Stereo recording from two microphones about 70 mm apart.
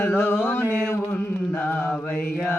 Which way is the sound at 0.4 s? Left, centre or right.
Left.